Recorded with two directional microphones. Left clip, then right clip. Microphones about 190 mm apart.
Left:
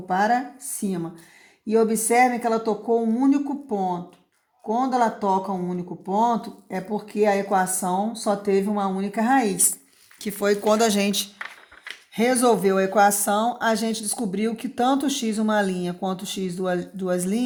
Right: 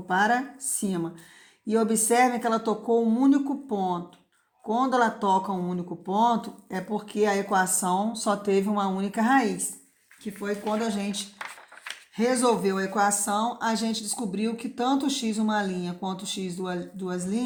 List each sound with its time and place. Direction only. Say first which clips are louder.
0.1 s speech: left 2 dB; 25° left (ahead or behind)
10.2 s speech: left 9 dB; 60° left (ahead or behind); by 17.4 s 35° left (ahead or behind)